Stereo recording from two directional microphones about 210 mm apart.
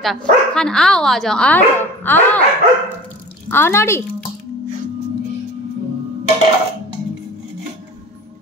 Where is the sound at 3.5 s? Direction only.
10° left (ahead or behind).